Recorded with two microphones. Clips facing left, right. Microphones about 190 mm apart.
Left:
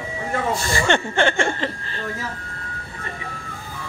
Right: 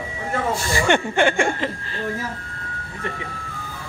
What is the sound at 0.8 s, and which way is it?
Speech, 10° right (ahead or behind).